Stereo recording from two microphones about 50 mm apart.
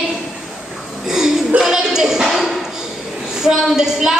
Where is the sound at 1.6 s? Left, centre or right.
Centre.